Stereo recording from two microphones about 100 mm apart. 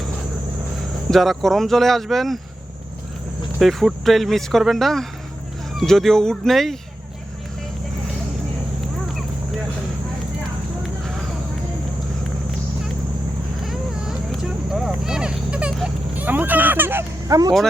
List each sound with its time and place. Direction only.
1.1 s speech: centre (ahead or behind)
3.6 s speech: centre (ahead or behind)
13.7 s a sound: 5° right (ahead or behind); by 17.0 s 20° right (ahead or behind)
17.2 s speech: 35° right (ahead or behind)